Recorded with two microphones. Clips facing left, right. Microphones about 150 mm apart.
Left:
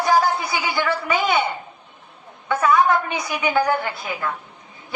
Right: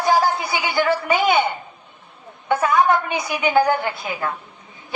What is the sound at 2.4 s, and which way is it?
A woman's voice, 30° right (ahead or behind).